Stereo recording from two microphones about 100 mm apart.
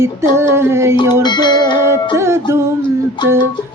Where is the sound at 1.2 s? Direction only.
50° left (ahead or behind).